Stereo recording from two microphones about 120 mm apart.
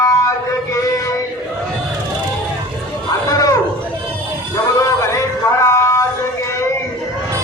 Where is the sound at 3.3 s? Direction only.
30° left (ahead or behind).